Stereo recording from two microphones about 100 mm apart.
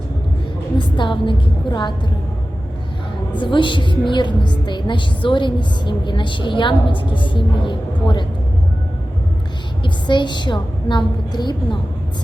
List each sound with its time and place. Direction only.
0.8 s a woman's voice: 55° left (ahead or behind)
3.3 s a woman's voice: 55° left (ahead or behind)
9.8 s a woman's voice: 50° left (ahead or behind)